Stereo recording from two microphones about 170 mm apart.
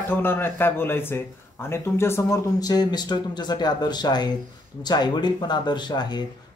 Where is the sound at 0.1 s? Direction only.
15° left (ahead or behind).